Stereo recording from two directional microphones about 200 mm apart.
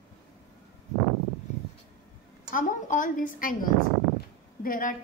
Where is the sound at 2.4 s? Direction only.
40° left (ahead or behind).